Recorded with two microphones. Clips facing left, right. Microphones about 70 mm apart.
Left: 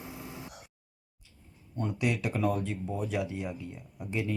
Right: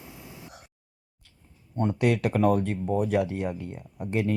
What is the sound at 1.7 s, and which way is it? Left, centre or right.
Speech, right.